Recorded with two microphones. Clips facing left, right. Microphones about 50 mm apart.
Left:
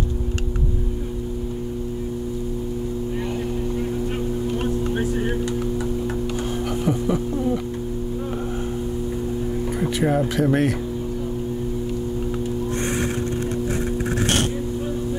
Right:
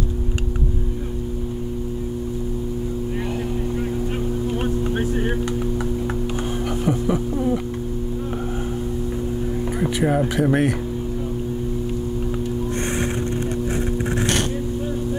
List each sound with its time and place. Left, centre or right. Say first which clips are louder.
4.9 s vehicle: right 1 dB; centre
6.8 s a sound: right 1 dB; centre
9.8 s speech: right 1 dB; centre